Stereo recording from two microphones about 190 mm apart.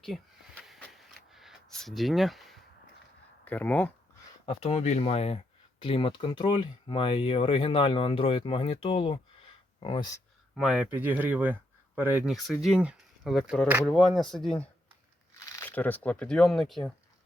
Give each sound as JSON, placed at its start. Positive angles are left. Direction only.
{"t": 0.0, "sound": "a sound", "side_deg": 0}
{"t": 3.4, "sound": "speech", "side_deg": 10}
{"t": 4.4, "sound": "speech", "side_deg": 30}
{"t": 10.5, "sound": "speech", "side_deg": -5}
{"t": 15.4, "sound": "a sound", "side_deg": 15}
{"t": 16.0, "sound": "speech", "side_deg": 5}